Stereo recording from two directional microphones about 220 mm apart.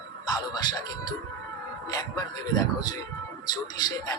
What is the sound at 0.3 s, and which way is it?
Speech, 20° left (ahead or behind).